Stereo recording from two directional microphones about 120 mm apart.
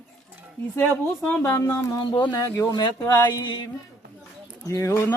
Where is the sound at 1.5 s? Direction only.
25° left (ahead or behind).